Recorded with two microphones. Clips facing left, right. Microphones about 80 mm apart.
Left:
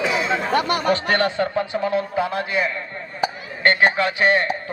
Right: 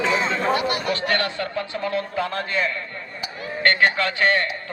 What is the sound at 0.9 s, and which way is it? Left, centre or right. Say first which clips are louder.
A man's voice: left 4 dB; left.